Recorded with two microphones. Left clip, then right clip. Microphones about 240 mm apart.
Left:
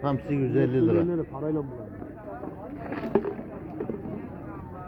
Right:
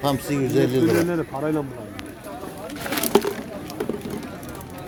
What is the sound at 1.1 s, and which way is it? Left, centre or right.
Speech, right.